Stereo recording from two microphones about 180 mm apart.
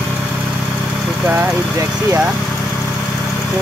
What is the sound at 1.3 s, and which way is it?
Speech, 10° right (ahead or behind).